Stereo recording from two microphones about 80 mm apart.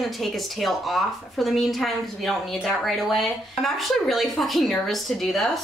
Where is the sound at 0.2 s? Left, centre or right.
Centre.